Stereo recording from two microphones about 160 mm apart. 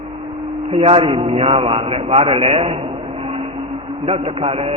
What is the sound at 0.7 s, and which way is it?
A man's voice, 35° right (ahead or behind).